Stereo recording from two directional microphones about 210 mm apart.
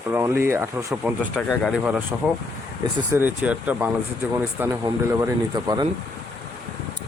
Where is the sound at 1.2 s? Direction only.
5° left (ahead or behind).